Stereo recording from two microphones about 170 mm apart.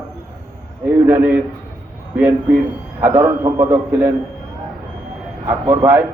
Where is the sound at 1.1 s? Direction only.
10° right (ahead or behind).